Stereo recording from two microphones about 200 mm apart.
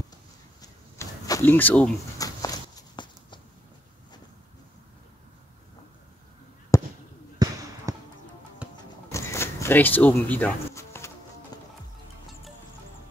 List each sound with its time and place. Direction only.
0.6 s a sound: 15° left (ahead or behind)
6.7 s fireworks: 15° left (ahead or behind)
7.4 s basketball bounce: 20° right (ahead or behind)
7.9 s music: 15° right (ahead or behind)
9.1 s a sound: 15° left (ahead or behind)
11.5 s music: 20° left (ahead or behind)